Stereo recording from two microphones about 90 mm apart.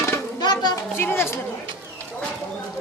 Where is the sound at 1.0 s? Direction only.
25° left (ahead or behind).